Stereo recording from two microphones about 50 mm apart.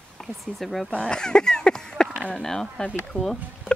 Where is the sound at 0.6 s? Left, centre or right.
Centre.